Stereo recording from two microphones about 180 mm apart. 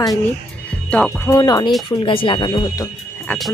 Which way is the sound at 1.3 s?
20° left (ahead or behind).